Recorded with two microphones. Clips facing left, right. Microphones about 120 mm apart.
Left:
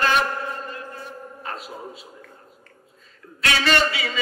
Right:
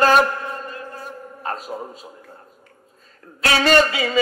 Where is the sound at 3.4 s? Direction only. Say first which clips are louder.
Right 5 dB; 45° right (ahead or behind).